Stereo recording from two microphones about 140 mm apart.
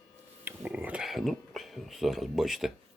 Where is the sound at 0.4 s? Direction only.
15° right (ahead or behind).